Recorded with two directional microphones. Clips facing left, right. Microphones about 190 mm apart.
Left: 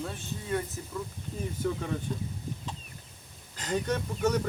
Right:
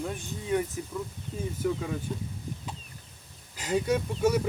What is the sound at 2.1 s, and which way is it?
Speech, 5° right (ahead or behind).